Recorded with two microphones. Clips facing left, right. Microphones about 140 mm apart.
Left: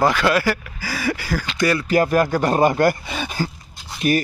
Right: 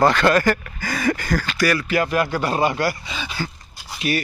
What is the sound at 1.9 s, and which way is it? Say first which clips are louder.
Speech: left 3 dB; 40° left (ahead or behind).